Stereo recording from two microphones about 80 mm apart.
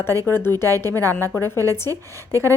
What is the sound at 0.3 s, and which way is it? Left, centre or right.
A woman's voice, left.